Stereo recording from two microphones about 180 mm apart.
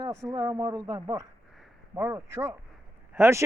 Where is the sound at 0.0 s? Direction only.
20° right (ahead or behind).